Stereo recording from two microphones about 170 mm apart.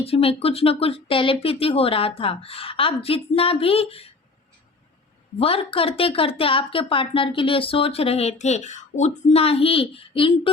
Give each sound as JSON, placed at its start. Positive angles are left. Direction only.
{"t": 0.0, "sound": "speech", "side_deg": 35}
{"t": 5.4, "sound": "speech", "side_deg": 35}